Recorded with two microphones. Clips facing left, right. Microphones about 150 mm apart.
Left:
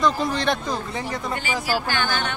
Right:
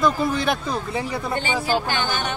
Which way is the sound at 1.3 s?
30° right (ahead or behind).